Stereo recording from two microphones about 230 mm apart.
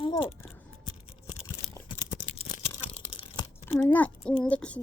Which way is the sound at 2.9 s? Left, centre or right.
Left.